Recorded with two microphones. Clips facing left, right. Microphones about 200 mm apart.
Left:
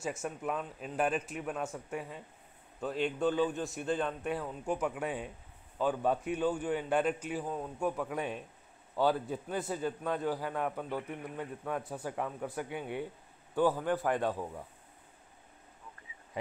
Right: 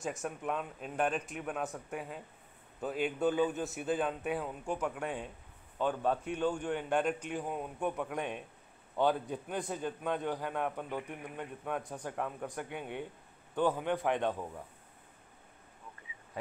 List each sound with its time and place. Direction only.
0.0 s a man's voice: centre (ahead or behind)
7.4 s a man's voice: 15° right (ahead or behind)
7.8 s a man's voice: centre (ahead or behind)